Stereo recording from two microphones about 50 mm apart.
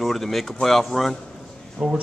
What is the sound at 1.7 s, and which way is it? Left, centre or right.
Speech, right.